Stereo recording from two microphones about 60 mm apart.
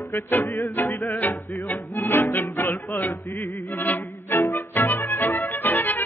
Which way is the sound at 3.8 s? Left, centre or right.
Left.